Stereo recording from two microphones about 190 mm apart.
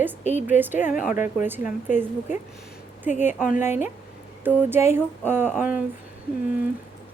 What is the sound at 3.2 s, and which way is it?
A woman's voice, 10° right (ahead or behind).